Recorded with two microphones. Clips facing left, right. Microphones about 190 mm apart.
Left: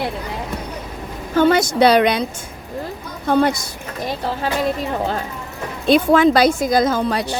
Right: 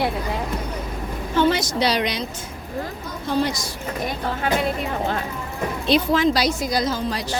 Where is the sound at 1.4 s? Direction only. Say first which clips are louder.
Left 6 dB; 50° left (ahead or behind).